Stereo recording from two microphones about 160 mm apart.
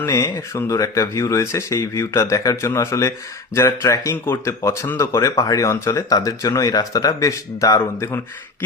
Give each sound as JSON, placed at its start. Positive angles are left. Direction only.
{"t": 0.0, "sound": "speech", "side_deg": 20}